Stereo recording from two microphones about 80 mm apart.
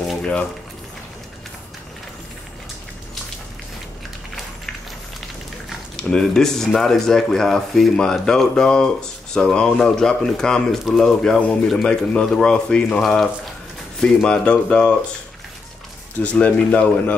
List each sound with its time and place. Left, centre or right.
0.2 s speech: centre
5.7 s speech: centre
16.2 s speech: centre